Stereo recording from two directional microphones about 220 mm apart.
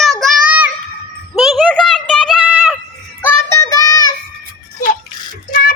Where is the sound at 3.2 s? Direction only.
10° left (ahead or behind).